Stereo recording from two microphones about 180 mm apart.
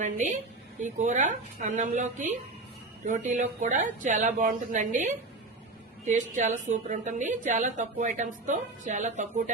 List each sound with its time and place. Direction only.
0.0 s a woman's voice: 45° right (ahead or behind)